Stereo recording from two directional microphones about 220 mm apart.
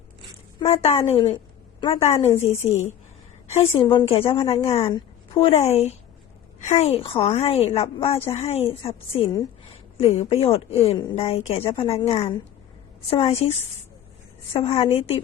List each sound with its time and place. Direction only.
0.6 s a woman's voice: 30° left (ahead or behind)
3.5 s a woman's voice: 30° left (ahead or behind)